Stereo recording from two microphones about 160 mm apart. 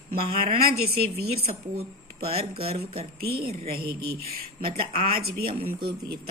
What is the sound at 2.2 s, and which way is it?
Speech, 40° right (ahead or behind).